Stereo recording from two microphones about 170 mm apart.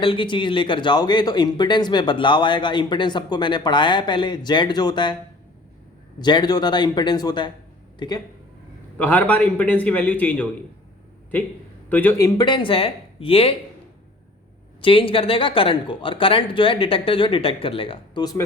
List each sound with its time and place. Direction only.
0.0 s speech: 30° left (ahead or behind)
6.1 s speech: 25° left (ahead or behind)
9.0 s a man's voice: 10° left (ahead or behind)
11.9 s speech: 10° left (ahead or behind); by 13.6 s 35° left (ahead or behind)
14.8 s speech: 30° left (ahead or behind)